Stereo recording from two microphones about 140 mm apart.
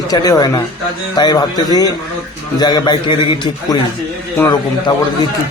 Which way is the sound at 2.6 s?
30° left (ahead or behind).